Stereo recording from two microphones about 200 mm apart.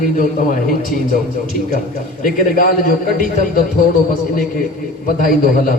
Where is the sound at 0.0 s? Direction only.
45° left (ahead or behind).